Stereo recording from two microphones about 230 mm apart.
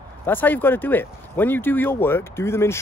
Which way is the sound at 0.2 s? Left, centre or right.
Centre.